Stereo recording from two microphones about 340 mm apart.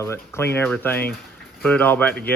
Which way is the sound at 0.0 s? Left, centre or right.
Centre.